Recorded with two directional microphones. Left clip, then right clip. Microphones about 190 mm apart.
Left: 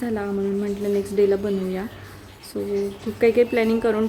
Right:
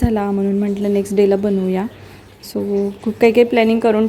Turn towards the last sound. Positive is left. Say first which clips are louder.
# right 6 dB
turn(degrees=-35)  # may be behind; listen again after turning